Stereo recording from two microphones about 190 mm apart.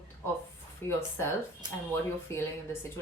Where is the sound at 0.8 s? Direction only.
10° left (ahead or behind).